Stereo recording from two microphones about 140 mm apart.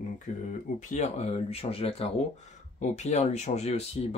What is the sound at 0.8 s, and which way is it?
Speech, 55° left (ahead or behind).